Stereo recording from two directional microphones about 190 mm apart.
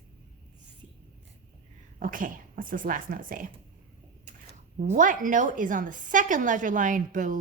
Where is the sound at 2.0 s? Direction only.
45° right (ahead or behind).